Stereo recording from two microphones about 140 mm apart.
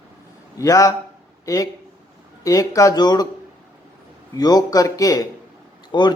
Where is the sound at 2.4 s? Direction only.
25° left (ahead or behind).